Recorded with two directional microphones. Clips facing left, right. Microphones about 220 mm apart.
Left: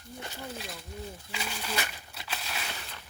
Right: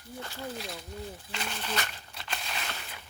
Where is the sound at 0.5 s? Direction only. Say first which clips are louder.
Right 2 dB; centre (ahead or behind).